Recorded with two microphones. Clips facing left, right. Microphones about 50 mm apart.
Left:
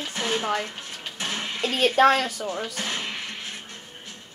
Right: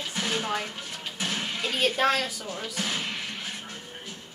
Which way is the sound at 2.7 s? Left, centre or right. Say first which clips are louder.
Left 1 dB; centre.